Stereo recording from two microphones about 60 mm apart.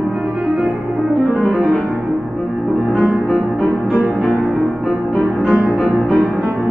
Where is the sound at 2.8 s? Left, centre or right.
Centre.